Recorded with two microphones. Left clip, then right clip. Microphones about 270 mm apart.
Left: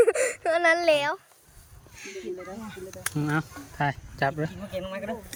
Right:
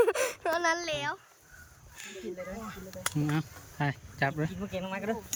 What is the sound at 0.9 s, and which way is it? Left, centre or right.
Speech, centre.